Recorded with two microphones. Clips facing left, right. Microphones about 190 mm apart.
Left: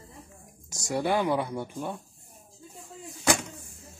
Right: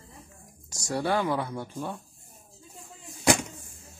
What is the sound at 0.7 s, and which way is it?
Speech, 20° left (ahead or behind).